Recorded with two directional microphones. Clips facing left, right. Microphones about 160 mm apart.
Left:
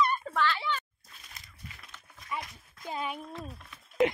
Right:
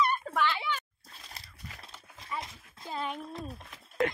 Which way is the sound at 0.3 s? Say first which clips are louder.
Even; 15° right (ahead or behind).